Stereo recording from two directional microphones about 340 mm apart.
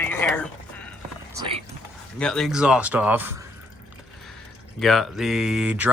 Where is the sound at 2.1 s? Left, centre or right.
Centre.